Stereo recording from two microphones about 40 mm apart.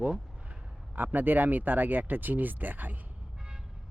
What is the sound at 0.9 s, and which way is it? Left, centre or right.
Speech, right.